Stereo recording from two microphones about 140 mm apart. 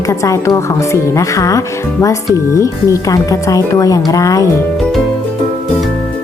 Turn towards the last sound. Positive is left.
turn(degrees=25)  # may be behind; listen again after turning